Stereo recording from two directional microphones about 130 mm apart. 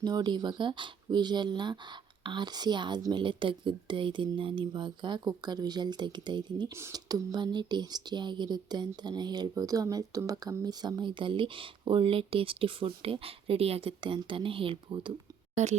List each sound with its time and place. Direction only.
0.0 s speech: 30° right (ahead or behind)
6.7 s speech: 25° right (ahead or behind)
15.6 s speech: 60° right (ahead or behind)